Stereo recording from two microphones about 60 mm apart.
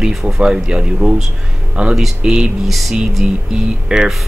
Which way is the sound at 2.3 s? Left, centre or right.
Centre.